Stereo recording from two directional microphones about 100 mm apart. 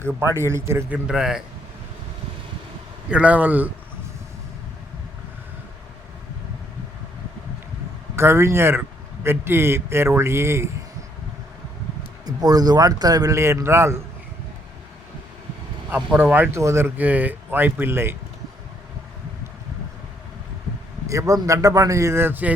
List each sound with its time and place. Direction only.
0.0 s speech: 25° right (ahead or behind)
0.9 s a man's voice: 10° right (ahead or behind)
3.1 s a man's voice: 15° right (ahead or behind)
8.1 s speech: 25° right (ahead or behind)
12.2 s a man's voice: 40° right (ahead or behind)
16.1 s speech: 20° right (ahead or behind)
21.1 s a man's voice: 35° right (ahead or behind); by 22.5 s 20° right (ahead or behind)